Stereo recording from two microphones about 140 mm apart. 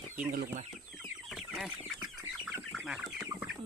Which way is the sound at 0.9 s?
Centre (ahead or behind).